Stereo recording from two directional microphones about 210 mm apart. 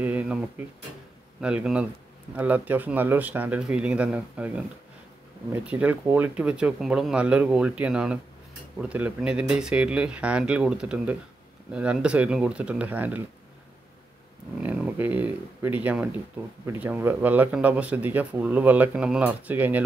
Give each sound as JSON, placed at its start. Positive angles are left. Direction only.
{"t": 0.0, "sound": "speech", "side_deg": -10}
{"t": 1.4, "sound": "speech", "side_deg": -5}
{"t": 14.6, "sound": "speech", "side_deg": -10}